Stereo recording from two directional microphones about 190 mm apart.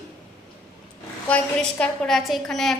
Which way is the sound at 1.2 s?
5° left (ahead or behind).